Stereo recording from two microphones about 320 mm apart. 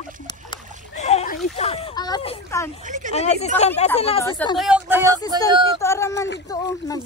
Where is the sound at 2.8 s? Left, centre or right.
Right.